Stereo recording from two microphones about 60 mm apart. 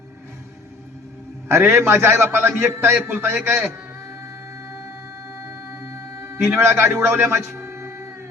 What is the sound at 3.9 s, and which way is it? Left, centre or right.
Music, right.